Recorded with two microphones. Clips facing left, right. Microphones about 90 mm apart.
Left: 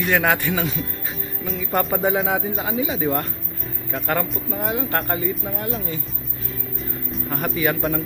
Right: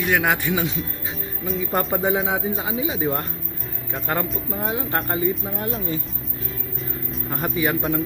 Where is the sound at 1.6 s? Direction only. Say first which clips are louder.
Left 1 dB; 35° right (ahead or behind).